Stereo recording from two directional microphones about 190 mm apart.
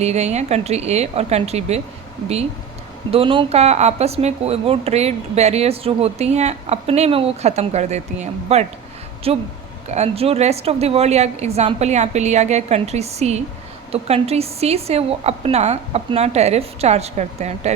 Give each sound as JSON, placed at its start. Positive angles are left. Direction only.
{"t": 0.0, "sound": "speech", "side_deg": -35}
{"t": 3.1, "sound": "speech", "side_deg": -30}